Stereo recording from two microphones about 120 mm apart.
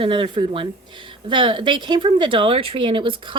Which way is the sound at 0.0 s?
45° right (ahead or behind).